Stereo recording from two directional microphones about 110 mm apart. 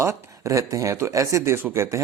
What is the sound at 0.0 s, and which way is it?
A man's voice, 25° right (ahead or behind).